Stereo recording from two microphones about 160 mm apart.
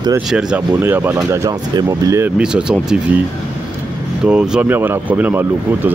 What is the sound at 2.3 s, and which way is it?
Speech, 5° right (ahead or behind).